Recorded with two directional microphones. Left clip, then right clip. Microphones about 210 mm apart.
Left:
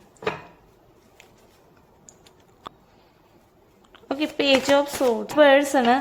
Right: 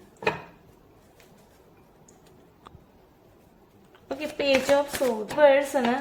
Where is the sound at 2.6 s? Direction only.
45° left (ahead or behind).